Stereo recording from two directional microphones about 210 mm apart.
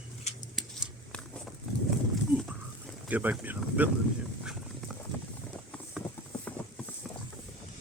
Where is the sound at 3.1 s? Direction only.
10° right (ahead or behind).